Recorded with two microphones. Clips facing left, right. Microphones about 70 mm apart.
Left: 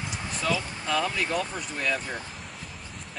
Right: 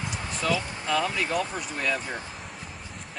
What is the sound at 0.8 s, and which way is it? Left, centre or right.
Speech, centre.